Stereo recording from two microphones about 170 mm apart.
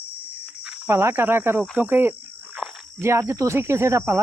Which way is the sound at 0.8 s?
15° right (ahead or behind).